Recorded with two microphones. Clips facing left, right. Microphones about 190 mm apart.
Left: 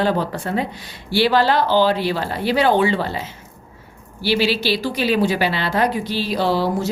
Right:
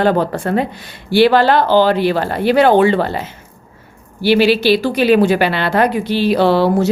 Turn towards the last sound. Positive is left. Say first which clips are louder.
# right 7 dB
turn(degrees=-65)  # may be behind; listen again after turning